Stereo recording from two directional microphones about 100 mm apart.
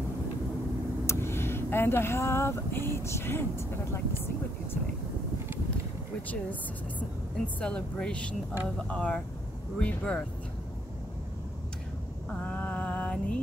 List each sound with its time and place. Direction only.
1.0 s speech: 25° left (ahead or behind)
7.0 s speech: 15° left (ahead or behind)
12.3 s female singing: 15° left (ahead or behind)